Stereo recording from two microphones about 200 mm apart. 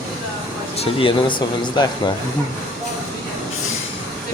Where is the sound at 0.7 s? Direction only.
25° left (ahead or behind).